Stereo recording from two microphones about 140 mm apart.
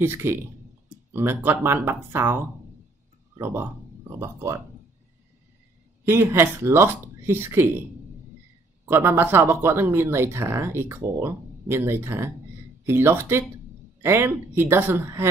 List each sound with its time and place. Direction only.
0.0 s speech: 15° right (ahead or behind)
6.0 s speech: 15° right (ahead or behind)
8.8 s speech: 15° right (ahead or behind)